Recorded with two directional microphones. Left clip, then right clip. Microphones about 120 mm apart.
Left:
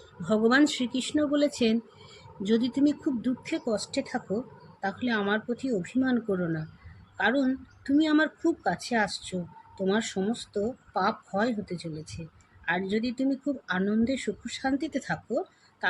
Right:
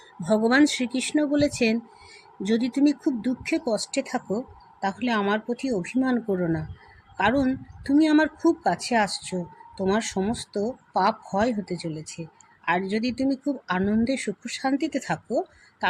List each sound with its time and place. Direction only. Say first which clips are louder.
0.3 s speech: right 3 dB; 65° right (ahead or behind)
7.4 s speech: right 3 dB; 65° right (ahead or behind); by 13.1 s 80° right
13.1 s speech: right 3 dB; 70° right (ahead or behind)